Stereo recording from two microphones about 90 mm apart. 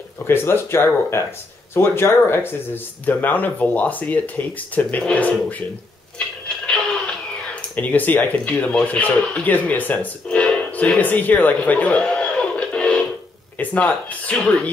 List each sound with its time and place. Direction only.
0.3 s speech: 25° left (ahead or behind)
6.1 s music: 10° left (ahead or behind)
7.7 s speech: 20° left (ahead or behind)